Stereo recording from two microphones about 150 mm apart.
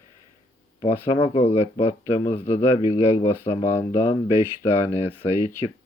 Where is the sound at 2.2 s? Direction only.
15° left (ahead or behind).